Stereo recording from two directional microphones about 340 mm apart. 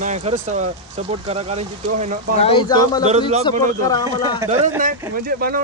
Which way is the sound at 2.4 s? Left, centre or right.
Centre.